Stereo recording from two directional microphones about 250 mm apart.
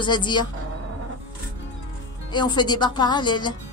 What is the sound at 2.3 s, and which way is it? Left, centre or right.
Speech, centre.